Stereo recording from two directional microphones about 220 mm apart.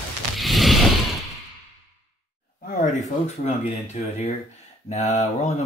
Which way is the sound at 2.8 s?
30° left (ahead or behind).